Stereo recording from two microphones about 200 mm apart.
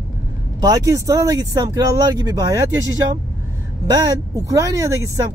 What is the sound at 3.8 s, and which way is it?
Speech, 20° right (ahead or behind).